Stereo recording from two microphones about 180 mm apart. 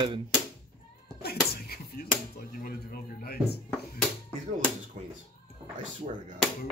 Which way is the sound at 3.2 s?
60° left (ahead or behind).